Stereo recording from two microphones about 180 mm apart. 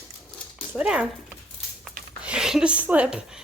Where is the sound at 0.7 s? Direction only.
5° right (ahead or behind).